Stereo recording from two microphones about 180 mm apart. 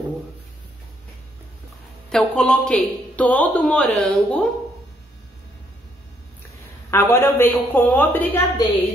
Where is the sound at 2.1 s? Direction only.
5° left (ahead or behind).